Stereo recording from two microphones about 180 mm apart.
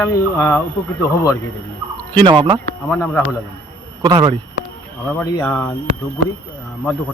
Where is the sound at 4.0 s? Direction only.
25° right (ahead or behind).